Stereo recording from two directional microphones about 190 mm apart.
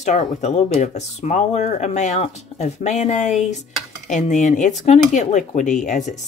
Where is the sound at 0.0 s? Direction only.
40° left (ahead or behind).